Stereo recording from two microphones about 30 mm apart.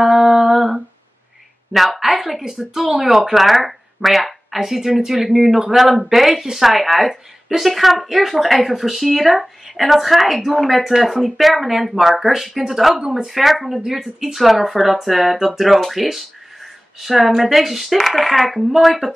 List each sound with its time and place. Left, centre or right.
0.0 s humming: centre
1.7 s a woman's voice: centre
2.4 s speech: right
2.8 s speech: centre